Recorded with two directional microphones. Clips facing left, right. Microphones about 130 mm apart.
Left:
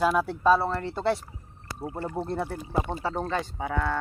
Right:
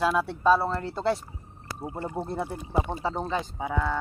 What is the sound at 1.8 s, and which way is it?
Speech, 20° right (ahead or behind).